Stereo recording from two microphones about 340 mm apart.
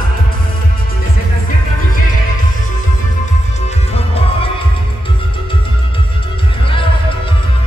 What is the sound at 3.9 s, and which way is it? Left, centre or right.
Music, centre.